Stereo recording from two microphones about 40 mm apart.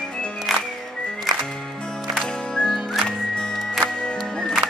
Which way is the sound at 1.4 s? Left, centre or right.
Centre.